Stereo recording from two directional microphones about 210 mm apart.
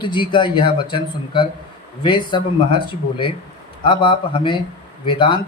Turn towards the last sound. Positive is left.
turn(degrees=20)  # may be behind; listen again after turning